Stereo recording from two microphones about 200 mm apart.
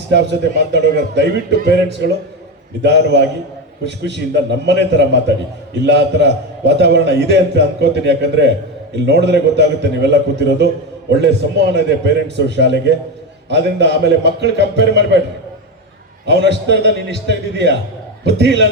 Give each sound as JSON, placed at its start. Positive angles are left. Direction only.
{"t": 0.1, "sound": "a man's voice", "side_deg": -60}
{"t": 2.8, "sound": "a man's voice", "side_deg": -60}
{"t": 16.2, "sound": "a man's voice", "side_deg": -60}